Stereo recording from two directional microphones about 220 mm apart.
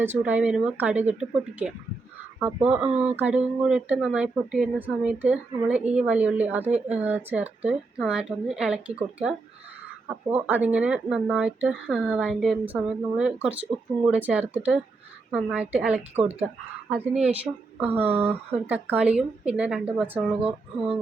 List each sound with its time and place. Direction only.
0.0 s speech: 10° right (ahead or behind)